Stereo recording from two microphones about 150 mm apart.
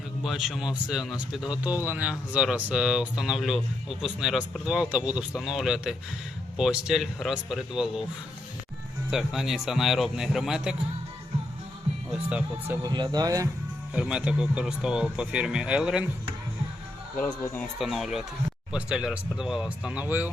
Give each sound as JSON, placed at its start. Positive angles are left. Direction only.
{"t": 0.2, "sound": "speech", "side_deg": 0}
{"t": 9.0, "sound": "speech", "side_deg": 0}
{"t": 12.1, "sound": "speech", "side_deg": -10}
{"t": 12.8, "sound": "speech", "side_deg": -30}
{"t": 13.9, "sound": "speech", "side_deg": -5}
{"t": 17.2, "sound": "speech", "side_deg": 15}
{"t": 17.7, "sound": "speech", "side_deg": 0}